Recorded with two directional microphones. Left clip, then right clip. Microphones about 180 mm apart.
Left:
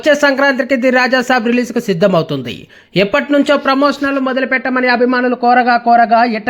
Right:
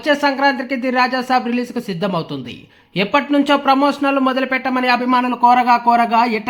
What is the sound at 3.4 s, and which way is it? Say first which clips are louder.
A man's voice: left 2 dB; 20° left (ahead or behind).